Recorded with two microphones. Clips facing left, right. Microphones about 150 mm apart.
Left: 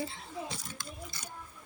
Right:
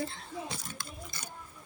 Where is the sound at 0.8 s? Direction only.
55° right (ahead or behind).